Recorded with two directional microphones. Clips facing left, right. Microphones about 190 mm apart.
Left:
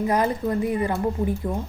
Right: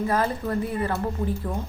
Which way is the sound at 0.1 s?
15° left (ahead or behind).